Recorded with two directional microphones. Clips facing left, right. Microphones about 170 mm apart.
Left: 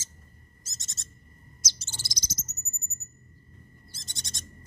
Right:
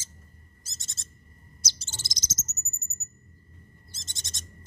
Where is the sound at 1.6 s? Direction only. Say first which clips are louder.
Right 1 dB; 30° right (ahead or behind).